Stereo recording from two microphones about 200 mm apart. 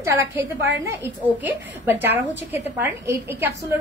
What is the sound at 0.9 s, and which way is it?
A woman's voice, 10° right (ahead or behind).